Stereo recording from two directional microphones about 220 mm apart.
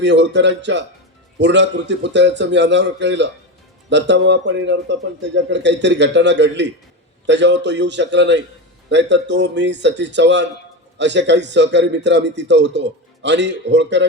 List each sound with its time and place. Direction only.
0.0 s a man's voice: 55° right (ahead or behind)